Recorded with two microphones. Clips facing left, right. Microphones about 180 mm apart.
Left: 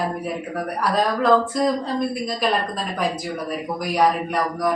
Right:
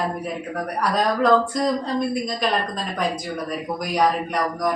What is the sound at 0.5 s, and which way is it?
Speech, centre (ahead or behind).